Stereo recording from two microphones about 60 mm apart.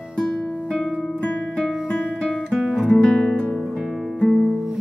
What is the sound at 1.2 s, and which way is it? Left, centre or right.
Music, centre.